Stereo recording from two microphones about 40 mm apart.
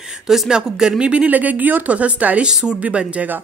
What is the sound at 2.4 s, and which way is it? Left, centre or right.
Speech, right.